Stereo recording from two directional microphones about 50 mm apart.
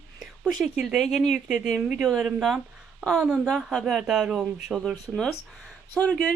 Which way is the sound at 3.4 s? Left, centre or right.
Centre.